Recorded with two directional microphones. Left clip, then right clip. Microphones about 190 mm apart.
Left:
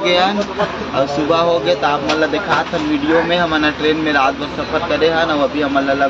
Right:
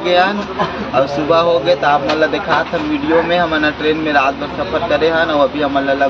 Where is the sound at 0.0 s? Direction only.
15° left (ahead or behind).